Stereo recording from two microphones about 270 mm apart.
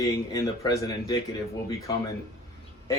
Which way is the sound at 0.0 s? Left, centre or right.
Centre.